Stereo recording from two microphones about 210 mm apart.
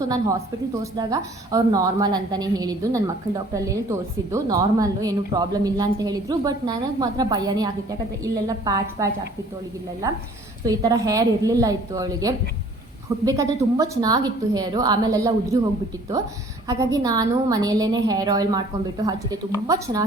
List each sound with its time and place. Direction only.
0.0 s a woman's voice: 15° right (ahead or behind)
10.7 s a woman's voice: 15° right (ahead or behind)
16.6 s a woman's voice: 15° right (ahead or behind)